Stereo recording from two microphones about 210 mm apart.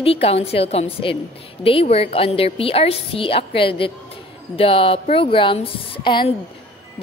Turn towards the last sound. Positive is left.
turn(degrees=25)  # may be behind; listen again after turning